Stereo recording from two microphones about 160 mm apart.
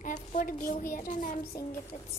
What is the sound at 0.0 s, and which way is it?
A child's voice, 55° left (ahead or behind).